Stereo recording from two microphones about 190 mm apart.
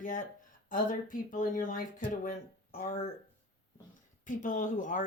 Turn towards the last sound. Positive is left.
turn(degrees=45)  # may be behind; listen again after turning